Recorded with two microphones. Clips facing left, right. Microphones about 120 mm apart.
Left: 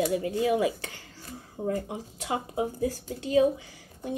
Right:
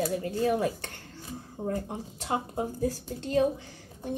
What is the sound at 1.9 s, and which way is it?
A woman's voice, 5° left (ahead or behind).